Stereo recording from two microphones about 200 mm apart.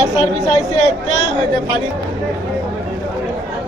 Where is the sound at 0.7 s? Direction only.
35° left (ahead or behind).